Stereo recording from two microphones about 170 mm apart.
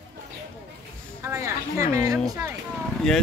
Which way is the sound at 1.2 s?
15° right (ahead or behind).